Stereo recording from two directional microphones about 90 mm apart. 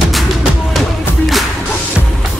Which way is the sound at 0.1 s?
Centre (ahead or behind).